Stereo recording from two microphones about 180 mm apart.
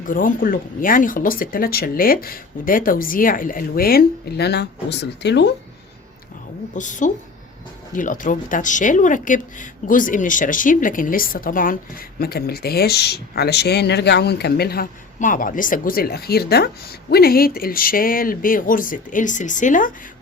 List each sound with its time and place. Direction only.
0.0 s speech: 50° left (ahead or behind); by 5.5 s 70° left (ahead or behind)
6.7 s speech: 45° left (ahead or behind)